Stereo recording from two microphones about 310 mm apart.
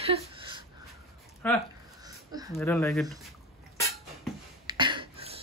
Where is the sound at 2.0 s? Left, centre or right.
Centre.